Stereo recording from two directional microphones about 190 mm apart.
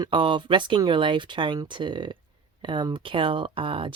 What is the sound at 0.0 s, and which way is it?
Speech, 25° right (ahead or behind).